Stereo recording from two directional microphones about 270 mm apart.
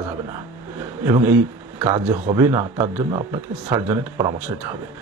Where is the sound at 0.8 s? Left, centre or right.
Centre.